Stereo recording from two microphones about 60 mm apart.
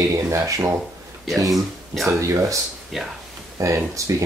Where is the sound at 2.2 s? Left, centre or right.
Right.